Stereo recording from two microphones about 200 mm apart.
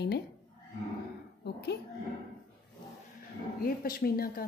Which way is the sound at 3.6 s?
50° left (ahead or behind).